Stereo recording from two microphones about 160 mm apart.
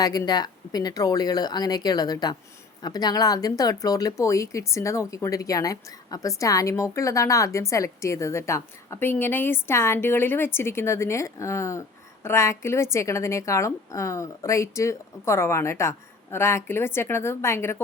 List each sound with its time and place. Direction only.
0.0 s a woman's voice: 25° left (ahead or behind)